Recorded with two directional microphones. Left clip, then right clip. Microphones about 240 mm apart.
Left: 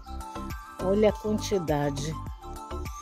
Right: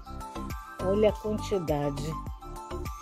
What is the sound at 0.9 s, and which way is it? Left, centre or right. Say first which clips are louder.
Speech: left 1 dB; centre.